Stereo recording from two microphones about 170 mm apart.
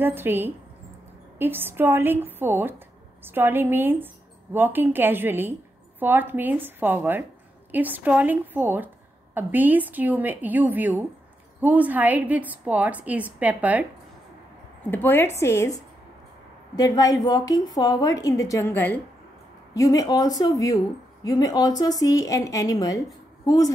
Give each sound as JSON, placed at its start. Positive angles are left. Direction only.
{"t": 0.0, "sound": "a woman's voice", "side_deg": -10}
{"t": 14.9, "sound": "speech", "side_deg": 10}